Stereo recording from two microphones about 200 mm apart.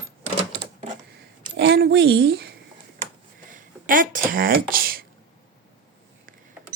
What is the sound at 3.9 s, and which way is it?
Speech, 45° right (ahead or behind).